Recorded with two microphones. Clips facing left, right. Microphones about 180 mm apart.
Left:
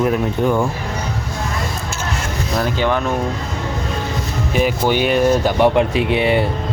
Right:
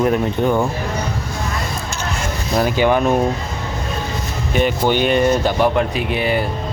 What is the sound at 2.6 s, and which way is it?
Speech, 10° right (ahead or behind).